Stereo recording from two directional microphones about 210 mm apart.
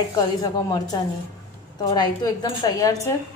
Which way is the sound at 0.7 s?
20° left (ahead or behind).